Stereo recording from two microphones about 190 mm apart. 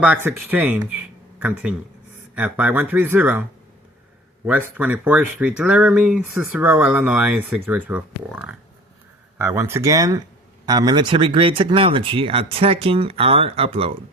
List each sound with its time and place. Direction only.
0.0 s speech: 10° right (ahead or behind)
4.4 s speech: 10° right (ahead or behind); by 13.9 s 30° right (ahead or behind)